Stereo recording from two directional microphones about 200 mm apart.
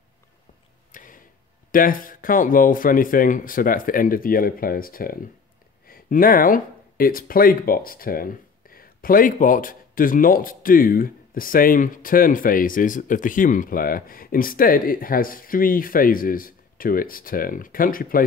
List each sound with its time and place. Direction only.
0.9 s tick-tock: 40° left (ahead or behind)
1.7 s speech: 45° left (ahead or behind)